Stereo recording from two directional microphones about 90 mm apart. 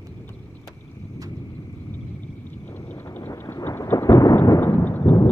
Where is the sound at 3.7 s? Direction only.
30° left (ahead or behind).